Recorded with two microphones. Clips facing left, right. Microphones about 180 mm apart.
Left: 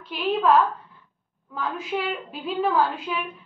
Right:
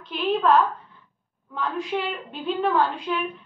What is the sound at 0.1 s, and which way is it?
A woman's voice, centre (ahead or behind).